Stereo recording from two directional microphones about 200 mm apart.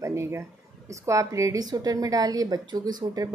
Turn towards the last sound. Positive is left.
turn(degrees=-20)  # may be behind; listen again after turning